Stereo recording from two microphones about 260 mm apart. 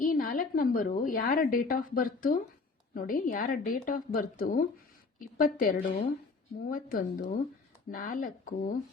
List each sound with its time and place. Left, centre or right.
0.0 s a woman's voice: left